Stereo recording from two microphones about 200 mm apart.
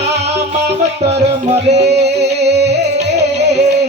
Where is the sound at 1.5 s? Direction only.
35° right (ahead or behind).